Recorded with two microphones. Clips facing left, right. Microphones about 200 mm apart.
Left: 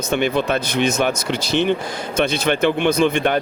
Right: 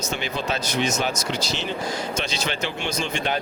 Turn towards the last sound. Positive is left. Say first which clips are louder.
# left 9 dB
turn(degrees=55)  # may be behind; listen again after turning